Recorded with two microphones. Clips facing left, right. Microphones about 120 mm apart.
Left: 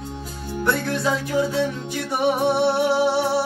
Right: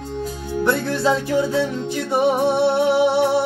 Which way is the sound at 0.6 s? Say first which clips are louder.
Right 3 dB; 30° right (ahead or behind).